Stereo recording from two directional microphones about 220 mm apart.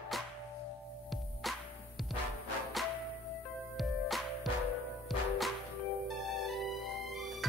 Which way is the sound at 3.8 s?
Centre (ahead or behind).